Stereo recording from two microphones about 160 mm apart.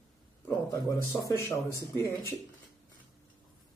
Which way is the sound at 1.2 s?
20° left (ahead or behind).